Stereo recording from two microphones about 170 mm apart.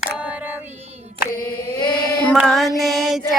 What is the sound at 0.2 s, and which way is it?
Female singing, 10° right (ahead or behind).